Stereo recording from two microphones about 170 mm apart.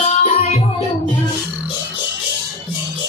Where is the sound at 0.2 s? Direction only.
45° left (ahead or behind).